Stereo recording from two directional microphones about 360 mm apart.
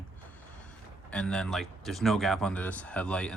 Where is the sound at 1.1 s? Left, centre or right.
Centre.